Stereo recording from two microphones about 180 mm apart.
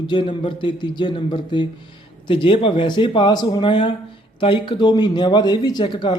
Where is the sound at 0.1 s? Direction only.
25° left (ahead or behind).